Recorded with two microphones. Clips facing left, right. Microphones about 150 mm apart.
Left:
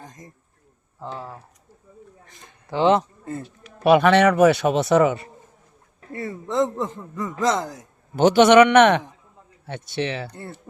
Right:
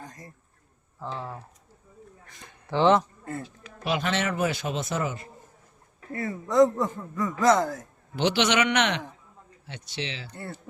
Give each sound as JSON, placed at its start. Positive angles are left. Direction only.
{"t": 0.0, "sound": "a sound", "side_deg": 20}
{"t": 0.9, "sound": "speech", "side_deg": 10}
{"t": 2.6, "sound": "speech", "side_deg": 15}
{"t": 3.8, "sound": "a man's voice", "side_deg": 65}
{"t": 6.1, "sound": "a man's voice", "side_deg": 25}
{"t": 8.1, "sound": "a man's voice", "side_deg": 45}